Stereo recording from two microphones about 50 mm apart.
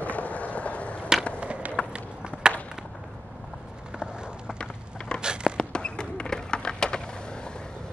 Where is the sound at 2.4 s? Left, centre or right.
Centre.